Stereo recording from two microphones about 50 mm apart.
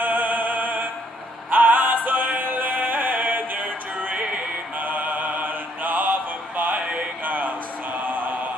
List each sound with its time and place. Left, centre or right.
0.0 s music: right
7.2 s a sound: right
8.0 s mantra: right